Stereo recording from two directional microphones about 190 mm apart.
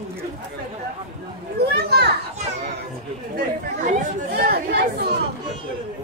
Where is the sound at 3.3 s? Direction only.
50° right (ahead or behind).